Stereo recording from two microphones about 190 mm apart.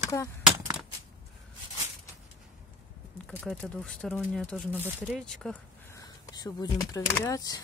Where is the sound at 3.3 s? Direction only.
Centre (ahead or behind).